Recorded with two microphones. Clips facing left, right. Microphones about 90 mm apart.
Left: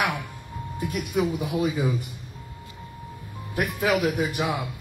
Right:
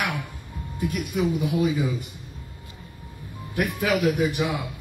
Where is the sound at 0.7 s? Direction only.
10° left (ahead or behind).